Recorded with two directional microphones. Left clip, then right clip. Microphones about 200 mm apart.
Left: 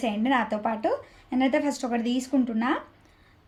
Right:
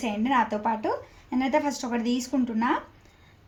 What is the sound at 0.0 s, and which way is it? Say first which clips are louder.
Speech: right 1 dB; 15° left (ahead or behind).